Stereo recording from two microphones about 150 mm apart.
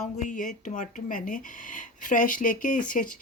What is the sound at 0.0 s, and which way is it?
Speech, 55° left (ahead or behind).